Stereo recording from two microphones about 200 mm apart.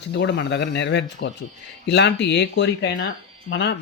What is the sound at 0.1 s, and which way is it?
Speech, 65° left (ahead or behind).